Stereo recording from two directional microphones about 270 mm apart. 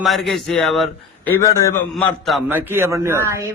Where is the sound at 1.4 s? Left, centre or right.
Centre.